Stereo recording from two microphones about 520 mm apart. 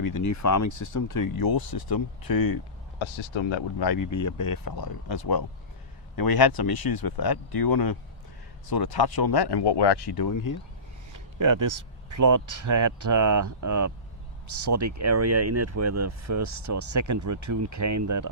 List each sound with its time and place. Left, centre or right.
0.0 s speech: left
3.0 s speech: left
11.1 s speech: right